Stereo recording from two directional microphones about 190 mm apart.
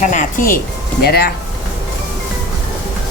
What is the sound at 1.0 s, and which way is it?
Speech, 55° left (ahead or behind).